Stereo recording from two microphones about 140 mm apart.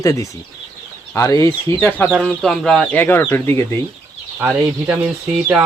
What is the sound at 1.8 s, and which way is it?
Speech, 10° left (ahead or behind).